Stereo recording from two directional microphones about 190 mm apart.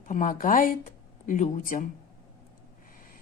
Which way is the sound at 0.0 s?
45° left (ahead or behind).